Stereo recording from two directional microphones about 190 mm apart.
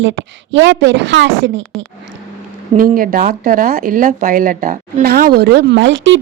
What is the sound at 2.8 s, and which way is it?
Speech, 45° right (ahead or behind).